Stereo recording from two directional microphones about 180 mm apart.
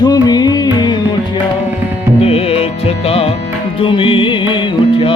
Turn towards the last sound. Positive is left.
turn(degrees=30)  # may be behind; listen again after turning